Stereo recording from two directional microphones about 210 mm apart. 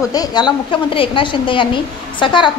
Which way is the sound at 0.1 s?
20° left (ahead or behind).